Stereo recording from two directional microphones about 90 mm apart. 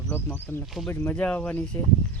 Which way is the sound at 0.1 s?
20° left (ahead or behind).